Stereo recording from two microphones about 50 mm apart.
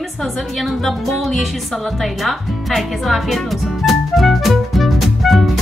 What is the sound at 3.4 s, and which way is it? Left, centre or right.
Music, centre.